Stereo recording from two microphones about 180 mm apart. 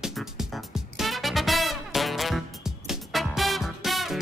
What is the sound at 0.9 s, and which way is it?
Music, centre (ahead or behind).